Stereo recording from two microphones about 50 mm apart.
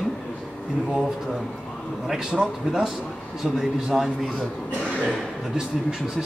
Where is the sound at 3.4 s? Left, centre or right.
Centre.